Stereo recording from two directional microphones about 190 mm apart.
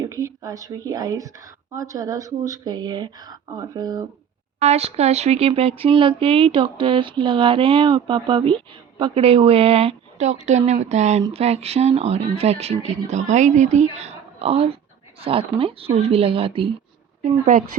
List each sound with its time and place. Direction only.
0.0 s speech: 15° right (ahead or behind)
4.6 s speech: 35° right (ahead or behind)